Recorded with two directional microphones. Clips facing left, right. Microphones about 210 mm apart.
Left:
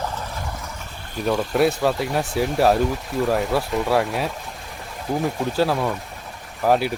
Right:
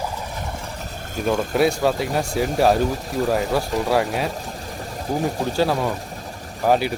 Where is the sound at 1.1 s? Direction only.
45° right (ahead or behind).